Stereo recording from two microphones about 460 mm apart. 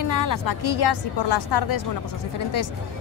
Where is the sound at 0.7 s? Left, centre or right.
Left.